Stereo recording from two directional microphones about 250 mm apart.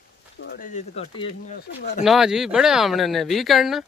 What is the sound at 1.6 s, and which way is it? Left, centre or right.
Speech, left.